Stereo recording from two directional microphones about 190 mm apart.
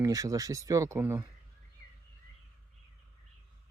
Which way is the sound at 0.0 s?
20° right (ahead or behind).